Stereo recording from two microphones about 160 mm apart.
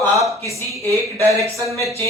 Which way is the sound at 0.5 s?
20° left (ahead or behind).